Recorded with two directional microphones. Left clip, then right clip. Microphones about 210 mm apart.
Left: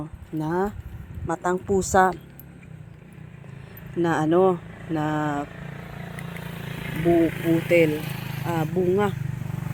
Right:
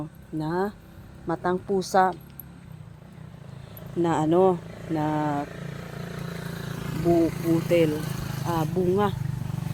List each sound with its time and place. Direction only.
0.3 s speech: 10° left (ahead or behind)
4.0 s speech: 5° left (ahead or behind)
5.5 s vehicle: 35° right (ahead or behind)
8.4 s speech: 10° left (ahead or behind)